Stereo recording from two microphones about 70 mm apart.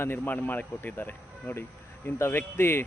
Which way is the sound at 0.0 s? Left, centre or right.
Left.